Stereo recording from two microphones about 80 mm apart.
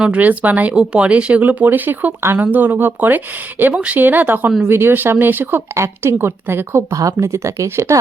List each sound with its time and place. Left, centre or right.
0.0 s speech: centre
6.9 s speech: right